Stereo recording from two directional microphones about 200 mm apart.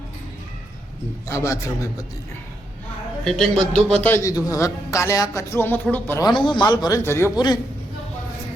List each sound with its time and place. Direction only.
1.3 s a man's voice: 15° left (ahead or behind)
3.2 s a man's voice: centre (ahead or behind); by 7.6 s 20° left (ahead or behind)